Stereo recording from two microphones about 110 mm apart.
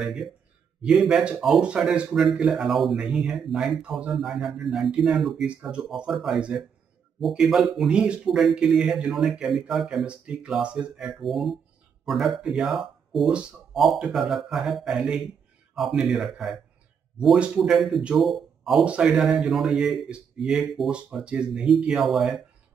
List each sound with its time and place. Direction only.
0.0 s speech: 5° right (ahead or behind)